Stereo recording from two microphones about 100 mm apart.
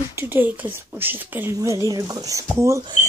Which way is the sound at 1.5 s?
30° right (ahead or behind).